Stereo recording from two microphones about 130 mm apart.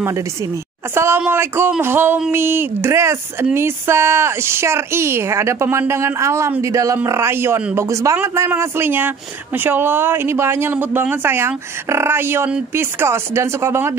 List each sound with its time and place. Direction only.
0.9 s speech: 20° right (ahead or behind)